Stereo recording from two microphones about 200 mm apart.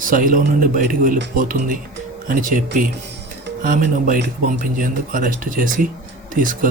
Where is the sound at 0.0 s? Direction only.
40° right (ahead or behind).